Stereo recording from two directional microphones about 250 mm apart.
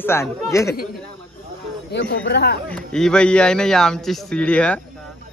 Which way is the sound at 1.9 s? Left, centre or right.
Left.